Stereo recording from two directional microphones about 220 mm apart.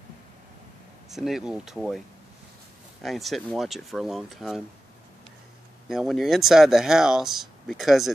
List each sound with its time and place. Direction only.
1.1 s speech: centre (ahead or behind)
5.9 s speech: centre (ahead or behind)